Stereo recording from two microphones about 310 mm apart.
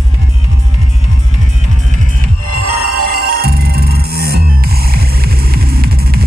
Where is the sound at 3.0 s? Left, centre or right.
Right.